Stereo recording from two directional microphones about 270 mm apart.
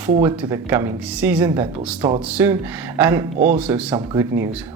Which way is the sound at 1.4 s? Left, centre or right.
Centre.